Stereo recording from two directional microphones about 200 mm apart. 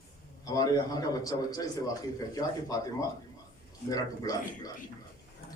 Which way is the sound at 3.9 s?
20° left (ahead or behind).